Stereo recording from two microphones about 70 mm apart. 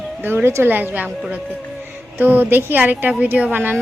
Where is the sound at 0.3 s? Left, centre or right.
Right.